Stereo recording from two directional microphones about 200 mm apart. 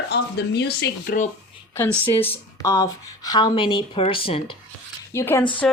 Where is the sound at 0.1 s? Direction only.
55° left (ahead or behind).